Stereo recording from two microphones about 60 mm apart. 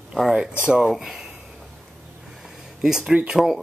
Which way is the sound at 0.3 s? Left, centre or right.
Centre.